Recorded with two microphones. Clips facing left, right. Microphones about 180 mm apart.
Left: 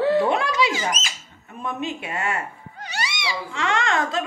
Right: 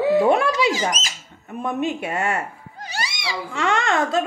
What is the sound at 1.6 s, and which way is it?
Speech, 50° right (ahead or behind).